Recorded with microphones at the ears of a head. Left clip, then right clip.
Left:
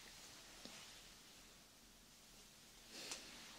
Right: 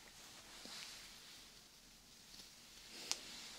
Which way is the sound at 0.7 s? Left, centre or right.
Right.